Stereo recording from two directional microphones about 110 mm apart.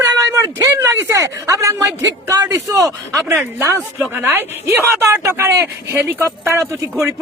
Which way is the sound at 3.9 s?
20° right (ahead or behind).